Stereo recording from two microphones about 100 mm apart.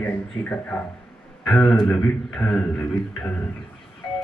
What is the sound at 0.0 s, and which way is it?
A man's voice, 10° left (ahead or behind).